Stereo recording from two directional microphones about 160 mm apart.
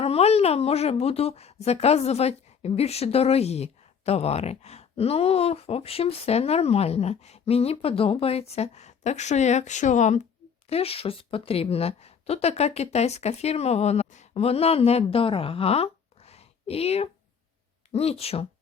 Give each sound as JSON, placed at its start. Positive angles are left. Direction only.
{"t": 0.0, "sound": "a woman's voice", "side_deg": 40}